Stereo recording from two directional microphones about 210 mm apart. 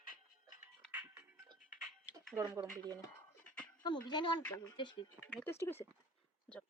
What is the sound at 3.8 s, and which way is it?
Speech, 20° left (ahead or behind).